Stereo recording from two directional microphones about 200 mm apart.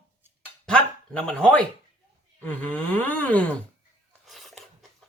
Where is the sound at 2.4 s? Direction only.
10° left (ahead or behind).